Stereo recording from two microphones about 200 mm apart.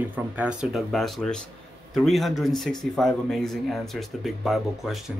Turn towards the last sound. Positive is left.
turn(degrees=0)  # may be behind; listen again after turning